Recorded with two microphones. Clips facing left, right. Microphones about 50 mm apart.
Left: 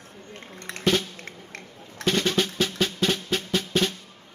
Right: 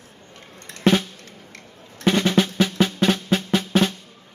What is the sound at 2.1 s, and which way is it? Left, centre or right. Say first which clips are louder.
Drum: right 5 dB; right.